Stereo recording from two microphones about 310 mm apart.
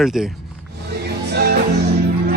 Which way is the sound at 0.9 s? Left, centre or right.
Right.